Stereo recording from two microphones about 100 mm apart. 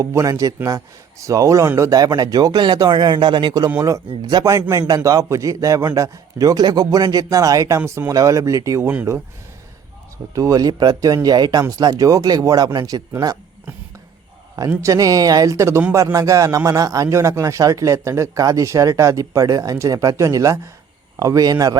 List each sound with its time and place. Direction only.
0.0 s a man's voice: 30° right (ahead or behind)
3.8 s a man's voice: 35° right (ahead or behind)
4.2 s a man's voice: 45° right (ahead or behind)
10.3 s a man's voice: 35° right (ahead or behind)
14.8 s a man's voice: 35° right (ahead or behind)